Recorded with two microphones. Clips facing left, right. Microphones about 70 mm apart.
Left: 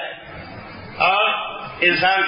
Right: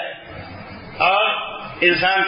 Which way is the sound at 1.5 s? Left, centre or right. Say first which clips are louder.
Right 2 dB; centre.